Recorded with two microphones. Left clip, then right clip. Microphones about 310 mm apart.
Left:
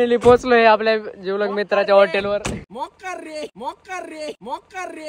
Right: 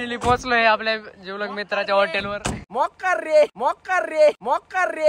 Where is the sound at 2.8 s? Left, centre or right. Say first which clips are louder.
Right 8 dB; right.